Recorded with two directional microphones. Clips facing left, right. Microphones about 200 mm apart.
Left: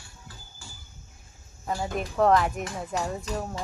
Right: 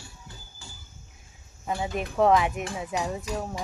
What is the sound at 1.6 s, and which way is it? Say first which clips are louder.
Speech: even; 5° right (ahead or behind).